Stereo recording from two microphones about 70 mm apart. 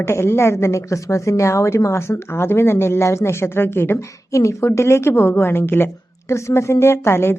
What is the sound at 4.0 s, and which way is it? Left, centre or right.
A woman's voice, left.